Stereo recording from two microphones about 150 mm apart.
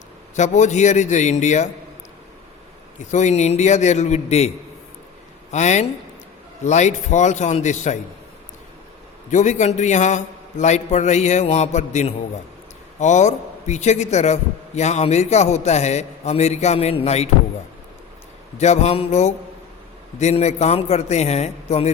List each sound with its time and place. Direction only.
0.3 s a man's voice: 55° left (ahead or behind)
3.1 s a man's voice: 50° left (ahead or behind)
9.3 s a man's voice: 55° left (ahead or behind)
18.5 s a man's voice: 50° left (ahead or behind)